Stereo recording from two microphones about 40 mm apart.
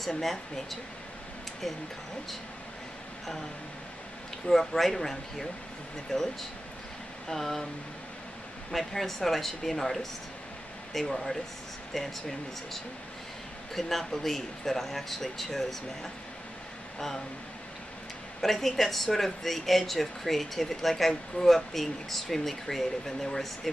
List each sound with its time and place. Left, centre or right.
0.0 s speech: centre
4.5 s speech: centre
7.2 s speech: centre
8.7 s speech: centre
18.4 s speech: centre